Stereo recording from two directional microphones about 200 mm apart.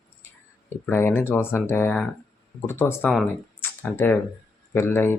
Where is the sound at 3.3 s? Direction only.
10° left (ahead or behind).